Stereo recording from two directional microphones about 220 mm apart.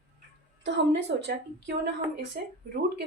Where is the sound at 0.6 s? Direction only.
50° right (ahead or behind).